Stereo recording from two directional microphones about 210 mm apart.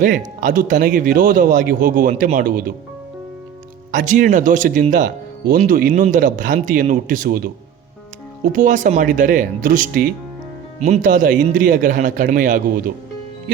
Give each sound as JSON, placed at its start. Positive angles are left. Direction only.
{"t": 0.0, "sound": "speech", "side_deg": -40}
{"t": 3.9, "sound": "speech", "side_deg": -40}
{"t": 8.5, "sound": "speech", "side_deg": -35}